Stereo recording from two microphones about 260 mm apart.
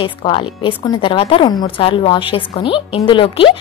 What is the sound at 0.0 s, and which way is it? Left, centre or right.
A woman's voice, centre.